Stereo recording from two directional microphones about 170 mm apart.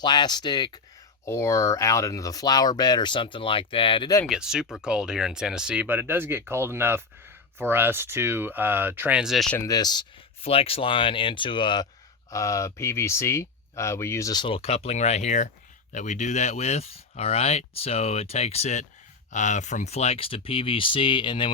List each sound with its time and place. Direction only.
0.0 s speech: 25° left (ahead or behind)
4.3 s speech: 5° right (ahead or behind)
9.6 s speech: 20° left (ahead or behind)